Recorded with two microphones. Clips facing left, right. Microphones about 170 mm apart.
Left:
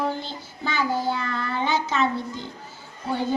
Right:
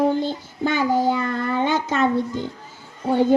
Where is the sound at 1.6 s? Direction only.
50° right (ahead or behind).